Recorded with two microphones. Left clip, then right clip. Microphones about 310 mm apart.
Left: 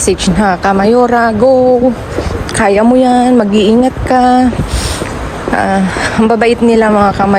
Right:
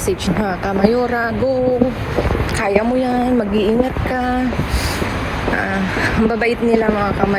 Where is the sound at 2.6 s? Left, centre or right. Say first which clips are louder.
Left 9 dB; left.